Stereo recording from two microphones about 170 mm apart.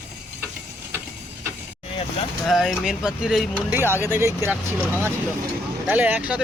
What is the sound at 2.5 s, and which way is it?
Speech, centre (ahead or behind).